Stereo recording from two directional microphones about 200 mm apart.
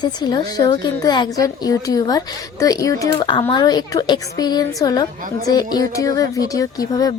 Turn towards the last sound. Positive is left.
turn(degrees=20)  # may be behind; listen again after turning